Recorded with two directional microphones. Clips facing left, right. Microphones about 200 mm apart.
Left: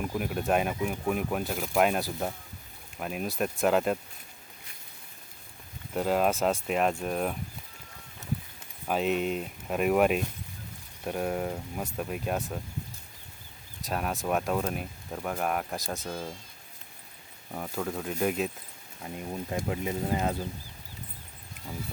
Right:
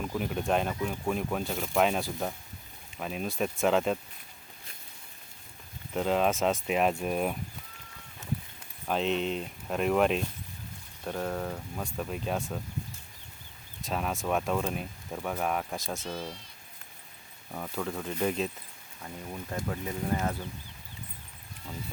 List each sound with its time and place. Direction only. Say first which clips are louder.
0.0 s speech: left 1 dB; 10° left (ahead or behind)
5.9 s speech: left 1 dB; 5° left (ahead or behind)
8.9 s speech: left 1 dB; 5° left (ahead or behind)
12.1 s speech: left 1 dB; 5° left (ahead or behind)
13.8 s speech: left 1 dB; centre (ahead or behind)
17.5 s speech: left 1 dB; 10° left (ahead or behind)
19.0 s speech: left 4 dB; 20° left (ahead or behind)